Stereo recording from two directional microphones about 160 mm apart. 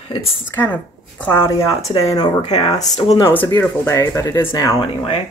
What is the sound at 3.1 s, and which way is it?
Speech, 15° left (ahead or behind).